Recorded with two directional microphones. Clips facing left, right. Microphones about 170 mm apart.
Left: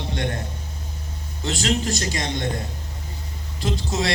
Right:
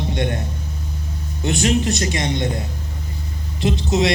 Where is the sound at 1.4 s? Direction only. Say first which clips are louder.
Right 5 dB; 20° right (ahead or behind).